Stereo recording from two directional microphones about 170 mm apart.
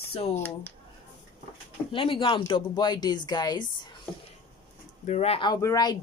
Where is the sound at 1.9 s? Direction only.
30° left (ahead or behind).